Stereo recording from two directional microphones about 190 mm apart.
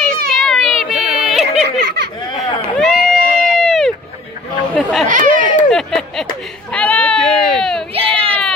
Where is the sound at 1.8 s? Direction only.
60° right (ahead or behind).